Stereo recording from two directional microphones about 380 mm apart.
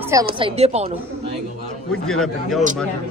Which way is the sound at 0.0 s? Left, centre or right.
Centre.